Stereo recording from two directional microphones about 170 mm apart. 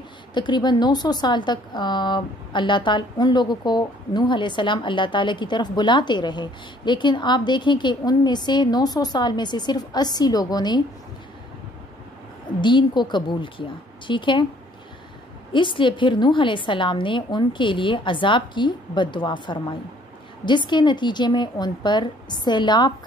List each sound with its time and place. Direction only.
0.3 s a woman's voice: 25° left (ahead or behind)
12.5 s a woman's voice: 25° left (ahead or behind)
15.5 s a woman's voice: 30° left (ahead or behind)